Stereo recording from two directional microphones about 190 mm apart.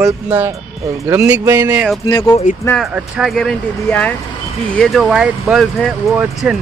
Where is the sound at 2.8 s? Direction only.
Centre (ahead or behind).